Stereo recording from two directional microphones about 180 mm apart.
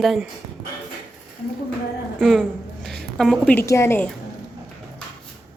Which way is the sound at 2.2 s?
5° left (ahead or behind).